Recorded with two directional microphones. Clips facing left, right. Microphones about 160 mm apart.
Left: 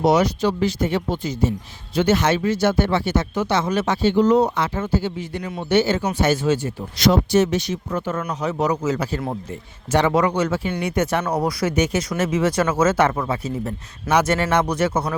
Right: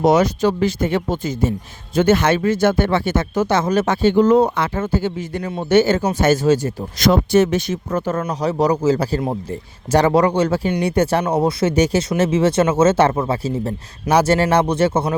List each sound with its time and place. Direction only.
0.0 s speech: 50° right (ahead or behind); by 15.1 s 30° right (ahead or behind)